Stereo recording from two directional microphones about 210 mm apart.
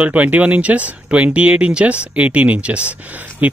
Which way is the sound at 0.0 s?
5° right (ahead or behind).